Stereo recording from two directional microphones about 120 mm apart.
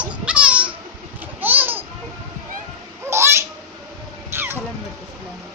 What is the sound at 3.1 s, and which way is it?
Baby laughter, 20° right (ahead or behind).